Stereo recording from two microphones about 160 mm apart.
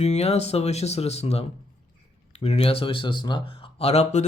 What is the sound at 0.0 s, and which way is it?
Speech, 40° left (ahead or behind).